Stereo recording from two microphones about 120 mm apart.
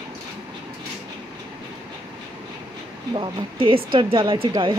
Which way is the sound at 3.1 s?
45° right (ahead or behind).